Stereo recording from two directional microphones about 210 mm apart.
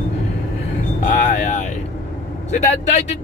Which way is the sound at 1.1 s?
35° left (ahead or behind).